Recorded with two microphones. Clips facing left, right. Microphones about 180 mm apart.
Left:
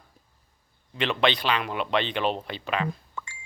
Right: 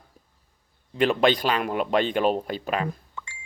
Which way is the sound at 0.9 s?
45° right (ahead or behind).